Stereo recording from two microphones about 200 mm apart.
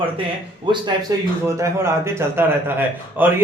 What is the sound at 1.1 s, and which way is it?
A man's voice, 20° right (ahead or behind).